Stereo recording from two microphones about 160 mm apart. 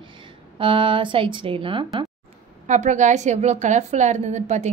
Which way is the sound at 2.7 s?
50° right (ahead or behind).